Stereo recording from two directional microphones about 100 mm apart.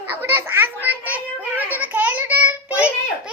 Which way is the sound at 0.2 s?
25° right (ahead or behind).